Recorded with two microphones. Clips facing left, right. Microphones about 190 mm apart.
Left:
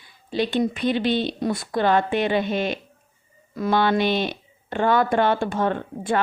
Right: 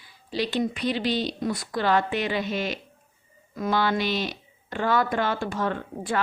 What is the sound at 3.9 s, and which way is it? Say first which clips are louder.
Speech: left 5 dB; 55° left (ahead or behind).